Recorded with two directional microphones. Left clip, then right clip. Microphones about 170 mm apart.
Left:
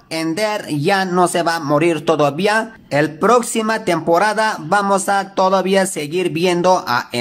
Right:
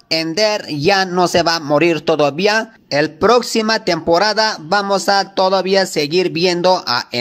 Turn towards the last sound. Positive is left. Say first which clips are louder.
# even
turn(degrees=-25)  # may be behind; listen again after turning